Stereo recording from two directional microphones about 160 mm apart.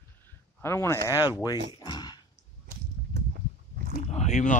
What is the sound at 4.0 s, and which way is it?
Speech, 45° left (ahead or behind).